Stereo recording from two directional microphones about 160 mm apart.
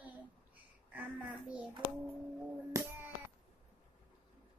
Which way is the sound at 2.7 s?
15° right (ahead or behind).